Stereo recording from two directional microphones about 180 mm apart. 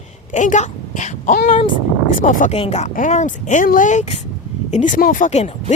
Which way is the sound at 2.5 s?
35° left (ahead or behind).